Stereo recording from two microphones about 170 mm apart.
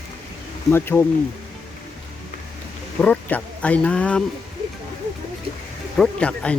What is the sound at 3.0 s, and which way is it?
Speech, 10° left (ahead or behind).